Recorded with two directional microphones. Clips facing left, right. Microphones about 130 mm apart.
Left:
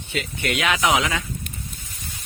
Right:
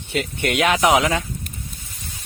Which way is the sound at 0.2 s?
50° right (ahead or behind).